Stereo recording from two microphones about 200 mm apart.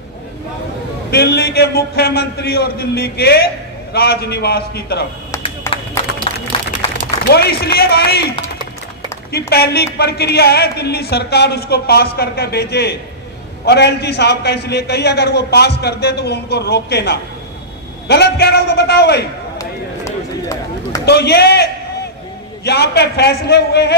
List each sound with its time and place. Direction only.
1.1 s speech: 55° left (ahead or behind)
5.7 s a sound: 15° left (ahead or behind)
6.3 s a sound: 25° left (ahead or behind)
7.2 s speech: 55° left (ahead or behind)
9.5 s a man's voice: 55° left (ahead or behind)
19.6 s run: 15° left (ahead or behind)
21.0 s a man's voice: 55° left (ahead or behind)